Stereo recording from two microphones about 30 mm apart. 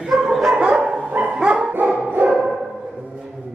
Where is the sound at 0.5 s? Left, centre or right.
Right.